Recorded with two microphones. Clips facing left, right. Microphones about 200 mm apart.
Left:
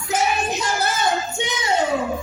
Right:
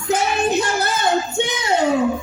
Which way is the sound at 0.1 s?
55° right (ahead or behind).